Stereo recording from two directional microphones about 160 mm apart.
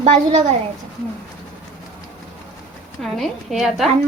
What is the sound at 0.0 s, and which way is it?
Speech, 45° right (ahead or behind).